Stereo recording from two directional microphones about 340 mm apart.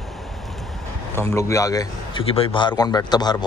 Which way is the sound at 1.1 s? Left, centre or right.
Centre.